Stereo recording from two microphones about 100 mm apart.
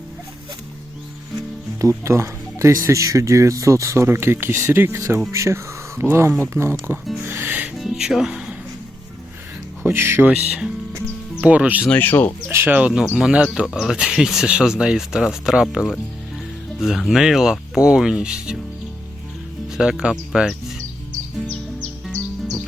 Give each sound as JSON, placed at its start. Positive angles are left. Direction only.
{"t": 1.8, "sound": "speech", "side_deg": -30}
{"t": 7.3, "sound": "music", "side_deg": -20}
{"t": 7.7, "sound": "music", "side_deg": -5}
{"t": 9.8, "sound": "speech", "side_deg": -25}
{"t": 11.9, "sound": "speech", "side_deg": 20}
{"t": 12.5, "sound": "speech", "side_deg": -25}
{"t": 12.7, "sound": "speech", "side_deg": -10}
{"t": 19.7, "sound": "speech", "side_deg": -5}